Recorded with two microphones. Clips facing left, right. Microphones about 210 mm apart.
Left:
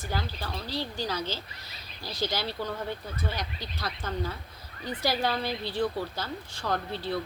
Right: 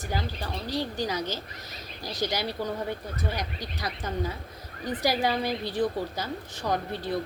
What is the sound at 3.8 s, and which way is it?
Speech, 15° right (ahead or behind).